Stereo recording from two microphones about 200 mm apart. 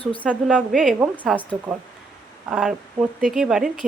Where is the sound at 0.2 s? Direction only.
5° right (ahead or behind).